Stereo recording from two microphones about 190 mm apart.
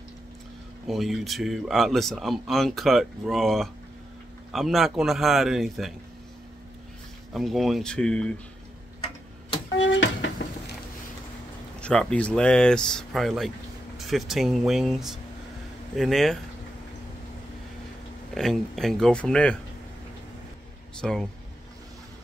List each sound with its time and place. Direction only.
0.8 s speech: centre (ahead or behind)
7.3 s speech: centre (ahead or behind)
9.8 s a sound: 75° left (ahead or behind)
11.8 s speech: 5° left (ahead or behind)
18.3 s speech: centre (ahead or behind)
21.0 s speech: 5° left (ahead or behind)